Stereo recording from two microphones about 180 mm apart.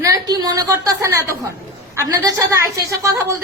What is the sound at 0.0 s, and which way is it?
A woman's voice, 20° right (ahead or behind).